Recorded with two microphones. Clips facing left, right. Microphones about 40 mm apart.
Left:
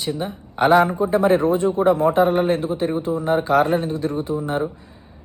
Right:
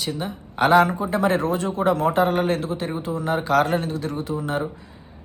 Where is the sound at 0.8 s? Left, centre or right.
Right.